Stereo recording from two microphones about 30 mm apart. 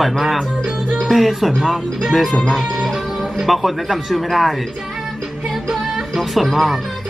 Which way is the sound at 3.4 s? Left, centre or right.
Centre.